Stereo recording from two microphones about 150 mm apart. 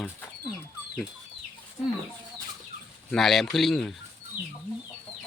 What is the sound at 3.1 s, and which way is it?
Speech, centre (ahead or behind).